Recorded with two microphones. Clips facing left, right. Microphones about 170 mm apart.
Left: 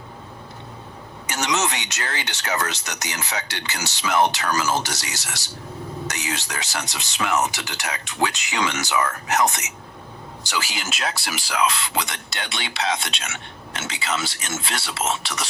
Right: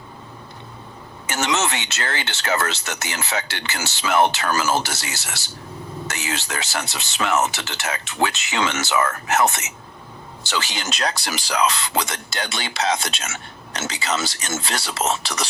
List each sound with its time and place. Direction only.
1.3 s speech: 15° left (ahead or behind)
10.5 s speech: 5° left (ahead or behind)